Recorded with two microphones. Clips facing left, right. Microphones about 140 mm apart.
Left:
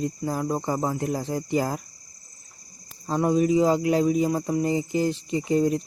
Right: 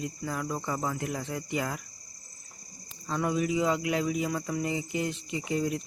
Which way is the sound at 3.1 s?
35° left (ahead or behind).